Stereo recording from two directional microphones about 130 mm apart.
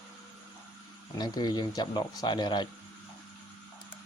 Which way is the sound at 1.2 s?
30° left (ahead or behind).